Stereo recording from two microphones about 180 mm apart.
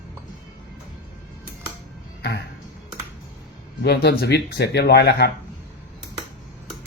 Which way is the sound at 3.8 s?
65° left (ahead or behind).